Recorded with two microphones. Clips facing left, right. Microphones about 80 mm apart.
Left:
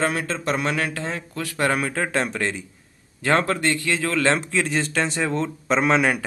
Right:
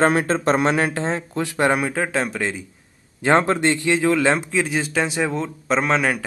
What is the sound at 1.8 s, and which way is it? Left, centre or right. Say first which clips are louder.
Speech: right 2 dB; centre.